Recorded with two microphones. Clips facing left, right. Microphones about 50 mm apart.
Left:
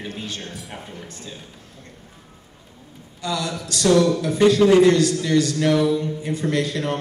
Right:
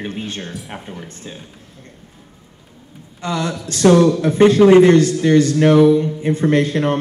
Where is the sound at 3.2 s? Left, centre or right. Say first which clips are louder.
Right 4 dB; right.